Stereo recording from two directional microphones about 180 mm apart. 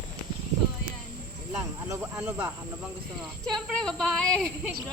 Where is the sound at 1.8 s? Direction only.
15° right (ahead or behind).